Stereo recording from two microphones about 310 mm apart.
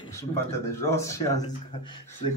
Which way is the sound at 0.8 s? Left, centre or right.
Centre.